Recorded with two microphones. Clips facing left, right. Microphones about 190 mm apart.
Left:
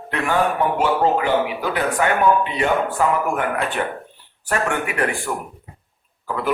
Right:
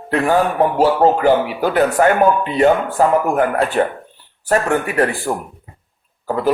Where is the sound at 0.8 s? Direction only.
40° right (ahead or behind).